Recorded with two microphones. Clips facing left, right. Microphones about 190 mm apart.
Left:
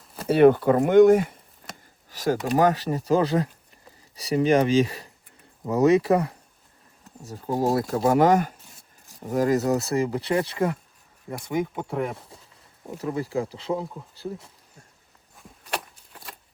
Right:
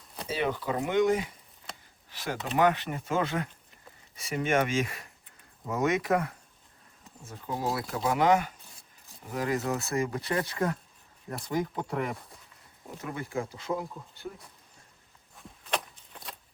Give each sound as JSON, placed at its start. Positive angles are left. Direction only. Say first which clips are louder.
{"t": 0.3, "sound": "speech", "louder": "left 14 dB", "side_deg": 60}
{"t": 2.0, "sound": "speech", "louder": "left 10 dB", "side_deg": 40}
{"t": 11.3, "sound": "speech", "louder": "left 4 dB", "side_deg": 15}
{"t": 11.6, "sound": "speech", "louder": "left 4 dB", "side_deg": 5}
{"t": 13.0, "sound": "speech", "louder": "left 7 dB", "side_deg": 35}
{"t": 15.4, "sound": "a sound", "louder": "left 1 dB", "side_deg": 0}